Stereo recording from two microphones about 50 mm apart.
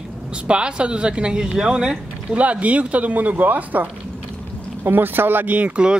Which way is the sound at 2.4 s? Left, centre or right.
Right.